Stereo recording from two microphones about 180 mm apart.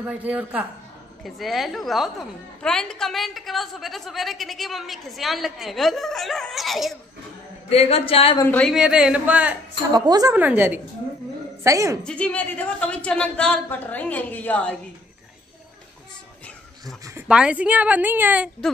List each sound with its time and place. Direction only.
0.0 s a woman's voice: 10° right (ahead or behind)
7.7 s speech: 35° left (ahead or behind)
8.4 s a woman's voice: 10° left (ahead or behind)
8.7 s a woman's voice: 5° right (ahead or behind)
9.9 s a woman's voice: 20° right (ahead or behind)
10.3 s a woman's voice: 10° right (ahead or behind)
12.0 s a woman's voice: 5° left (ahead or behind)
16.8 s speech: 20° right (ahead or behind)
17.3 s a woman's voice: 5° right (ahead or behind)